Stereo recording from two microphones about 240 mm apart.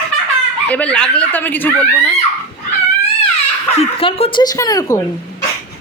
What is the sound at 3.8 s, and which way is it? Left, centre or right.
Speech, left.